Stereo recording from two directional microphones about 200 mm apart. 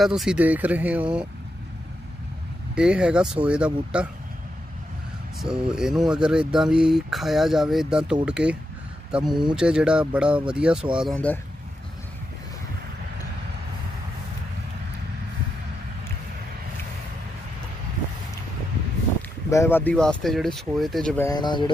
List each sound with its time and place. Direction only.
0.0 s speech: centre (ahead or behind)
2.7 s speech: 5° right (ahead or behind)
5.4 s speech: 5° right (ahead or behind)
9.2 s speech: 20° right (ahead or behind)
9.6 s speech: 5° right (ahead or behind)
19.5 s speech: 10° left (ahead or behind)
21.3 s speech: 20° left (ahead or behind)